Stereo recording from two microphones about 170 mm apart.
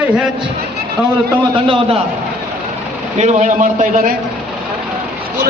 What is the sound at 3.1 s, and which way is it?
A man's voice, 40° right (ahead or behind).